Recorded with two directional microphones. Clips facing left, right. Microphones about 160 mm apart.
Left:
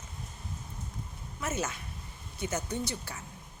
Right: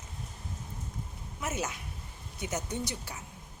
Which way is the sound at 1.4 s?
15° right (ahead or behind).